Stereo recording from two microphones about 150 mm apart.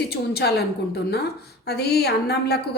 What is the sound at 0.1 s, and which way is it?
Speech, 90° left.